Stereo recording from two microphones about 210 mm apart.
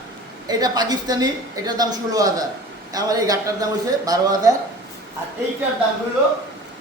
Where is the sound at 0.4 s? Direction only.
20° right (ahead or behind).